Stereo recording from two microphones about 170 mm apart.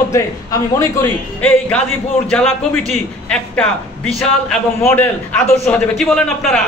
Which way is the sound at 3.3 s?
5° left (ahead or behind).